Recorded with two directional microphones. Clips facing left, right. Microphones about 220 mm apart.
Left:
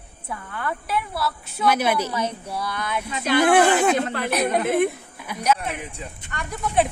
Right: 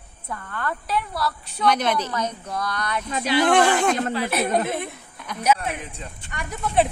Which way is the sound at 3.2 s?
50° left (ahead or behind).